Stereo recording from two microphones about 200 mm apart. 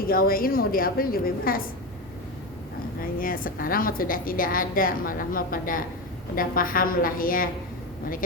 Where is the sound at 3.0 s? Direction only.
45° left (ahead or behind).